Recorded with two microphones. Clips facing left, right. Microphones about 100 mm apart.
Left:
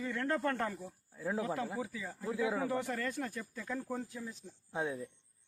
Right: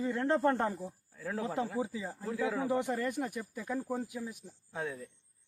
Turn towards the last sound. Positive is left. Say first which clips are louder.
# left 2 dB
turn(degrees=20)  # may be behind; listen again after turning